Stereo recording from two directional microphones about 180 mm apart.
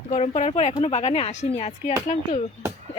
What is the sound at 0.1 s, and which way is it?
Speech, 40° left (ahead or behind).